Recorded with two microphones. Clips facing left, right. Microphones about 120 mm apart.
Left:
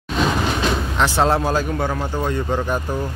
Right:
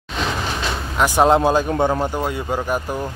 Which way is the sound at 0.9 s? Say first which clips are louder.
Right 5 dB; 15° right (ahead or behind).